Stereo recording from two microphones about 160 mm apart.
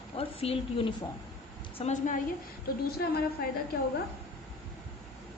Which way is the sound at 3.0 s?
90° left.